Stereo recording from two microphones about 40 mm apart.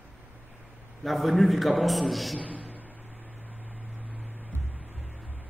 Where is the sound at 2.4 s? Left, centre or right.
Left.